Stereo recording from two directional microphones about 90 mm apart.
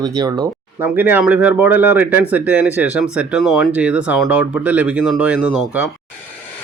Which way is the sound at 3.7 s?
15° right (ahead or behind).